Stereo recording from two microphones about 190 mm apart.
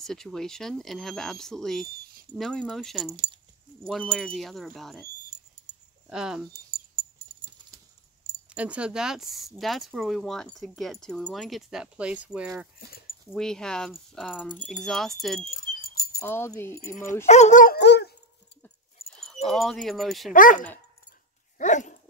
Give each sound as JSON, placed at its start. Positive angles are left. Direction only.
{"t": 0.0, "sound": "speech", "side_deg": 0}
{"t": 5.7, "sound": "keys jangling", "side_deg": -35}
{"t": 6.0, "sound": "speech", "side_deg": -5}
{"t": 6.5, "sound": "keys jangling", "side_deg": -30}
{"t": 8.5, "sound": "speech", "side_deg": -5}
{"t": 12.8, "sound": "speech", "side_deg": 55}
{"t": 13.3, "sound": "speech", "side_deg": 5}
{"t": 15.5, "sound": "a sound", "side_deg": 50}
{"t": 16.2, "sound": "speech", "side_deg": 15}
{"t": 17.3, "sound": "dog", "side_deg": 40}
{"t": 19.4, "sound": "speech", "side_deg": 0}
{"t": 20.3, "sound": "dog", "side_deg": 45}